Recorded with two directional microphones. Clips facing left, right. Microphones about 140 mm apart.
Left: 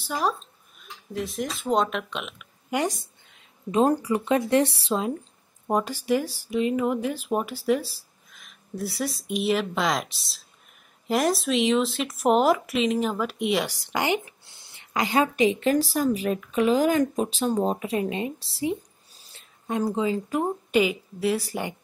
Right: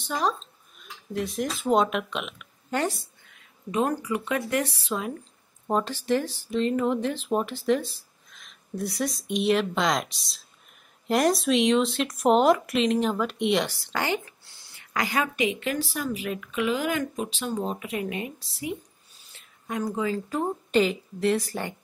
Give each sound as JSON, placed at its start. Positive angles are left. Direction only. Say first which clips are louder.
{"t": 0.0, "sound": "speech", "louder": "even", "side_deg": 5}
{"t": 2.7, "sound": "speech", "louder": "left 1 dB", "side_deg": 15}
{"t": 5.7, "sound": "speech", "louder": "left 1 dB", "side_deg": 10}
{"t": 13.7, "sound": "a woman's voice", "louder": "left 3 dB", "side_deg": 15}
{"t": 20.2, "sound": "speech", "louder": "left 2 dB", "side_deg": 10}